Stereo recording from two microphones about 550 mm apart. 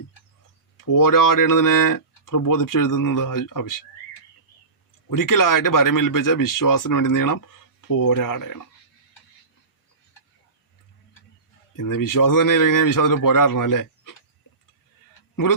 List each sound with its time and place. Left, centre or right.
0.8 s speech: left
5.0 s speech: left
11.8 s speech: left